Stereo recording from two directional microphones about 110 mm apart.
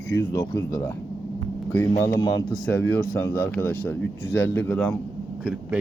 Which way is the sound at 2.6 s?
15° left (ahead or behind).